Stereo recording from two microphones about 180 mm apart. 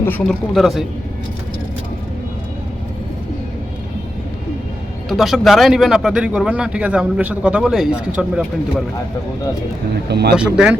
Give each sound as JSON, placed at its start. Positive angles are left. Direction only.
{"t": 0.0, "sound": "speech", "side_deg": 5}
{"t": 5.0, "sound": "speech", "side_deg": 0}
{"t": 10.1, "sound": "speech", "side_deg": -65}
{"t": 10.3, "sound": "speech", "side_deg": -5}